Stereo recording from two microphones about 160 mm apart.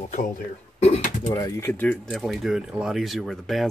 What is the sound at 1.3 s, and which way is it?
Speech, 20° left (ahead or behind).